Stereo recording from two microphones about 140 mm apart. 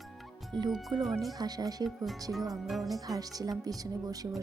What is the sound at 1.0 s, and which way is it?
Music, centre (ahead or behind).